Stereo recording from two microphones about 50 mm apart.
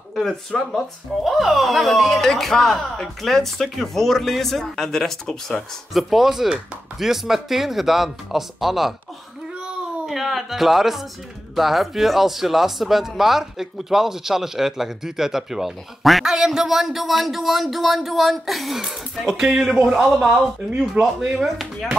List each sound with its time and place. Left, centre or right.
0.1 s speech: centre
5.9 s speech: centre
10.0 s speech: centre
21.0 s speech: right